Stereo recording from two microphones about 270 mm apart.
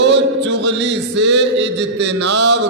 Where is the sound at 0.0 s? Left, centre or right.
Right.